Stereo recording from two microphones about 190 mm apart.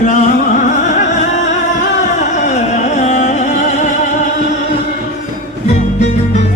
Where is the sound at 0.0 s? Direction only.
40° left (ahead or behind).